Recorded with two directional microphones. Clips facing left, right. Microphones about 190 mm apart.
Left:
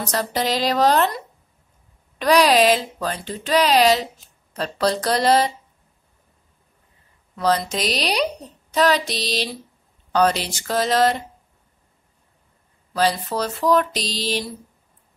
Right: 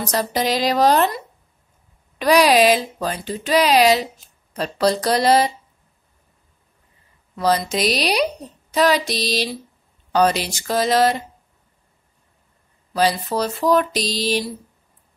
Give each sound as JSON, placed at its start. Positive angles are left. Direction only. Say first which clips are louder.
{"t": 0.1, "sound": "speech", "louder": "right 2 dB", "side_deg": -15}
{"t": 7.3, "sound": "speech", "louder": "right 2 dB", "side_deg": -10}
{"t": 12.9, "sound": "speech", "louder": "right 2 dB", "side_deg": -15}